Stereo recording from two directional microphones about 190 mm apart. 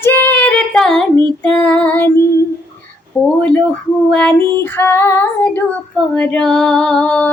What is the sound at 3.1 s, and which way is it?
Female singing, 5° left (ahead or behind).